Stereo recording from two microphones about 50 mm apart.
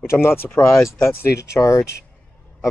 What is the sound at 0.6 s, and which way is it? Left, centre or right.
Speech, left.